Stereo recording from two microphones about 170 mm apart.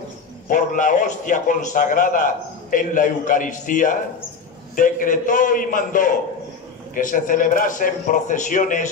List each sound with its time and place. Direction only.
0.5 s a man's voice: 50° left (ahead or behind)